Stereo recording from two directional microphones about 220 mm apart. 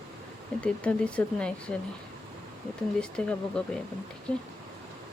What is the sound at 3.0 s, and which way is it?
Speech, 5° left (ahead or behind).